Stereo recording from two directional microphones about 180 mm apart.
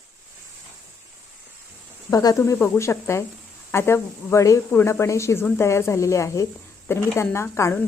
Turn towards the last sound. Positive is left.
turn(degrees=15)  # may be behind; listen again after turning